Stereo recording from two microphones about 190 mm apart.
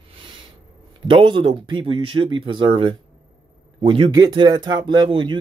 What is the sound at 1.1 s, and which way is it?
Speech, 25° right (ahead or behind).